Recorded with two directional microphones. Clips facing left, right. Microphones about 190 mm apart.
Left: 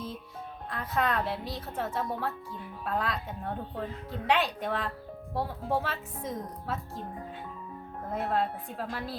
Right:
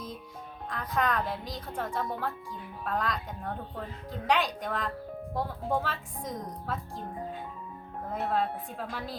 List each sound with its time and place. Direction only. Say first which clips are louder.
0.7 s a woman's voice: even; 5° left (ahead or behind)
8.1 s a woman's voice: even; centre (ahead or behind)